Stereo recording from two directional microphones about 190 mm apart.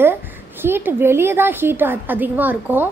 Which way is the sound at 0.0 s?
10° right (ahead or behind).